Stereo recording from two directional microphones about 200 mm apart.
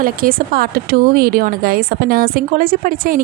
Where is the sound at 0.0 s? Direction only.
45° right (ahead or behind).